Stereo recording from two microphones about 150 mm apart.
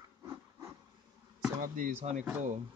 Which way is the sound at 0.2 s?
20° right (ahead or behind).